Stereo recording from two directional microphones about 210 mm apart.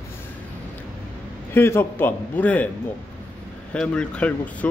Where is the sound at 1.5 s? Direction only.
10° left (ahead or behind).